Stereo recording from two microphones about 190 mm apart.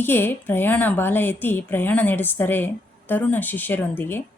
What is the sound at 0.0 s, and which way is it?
Speech, 10° left (ahead or behind).